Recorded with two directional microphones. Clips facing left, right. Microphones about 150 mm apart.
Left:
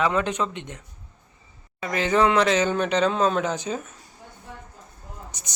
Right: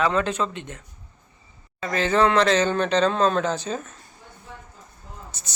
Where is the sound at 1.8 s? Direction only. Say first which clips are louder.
Right 1 dB; 15° left (ahead or behind).